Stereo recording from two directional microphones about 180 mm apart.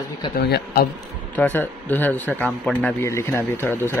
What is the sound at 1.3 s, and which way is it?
A man's voice, 10° left (ahead or behind).